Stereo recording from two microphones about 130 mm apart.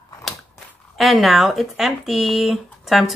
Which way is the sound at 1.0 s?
Centre (ahead or behind).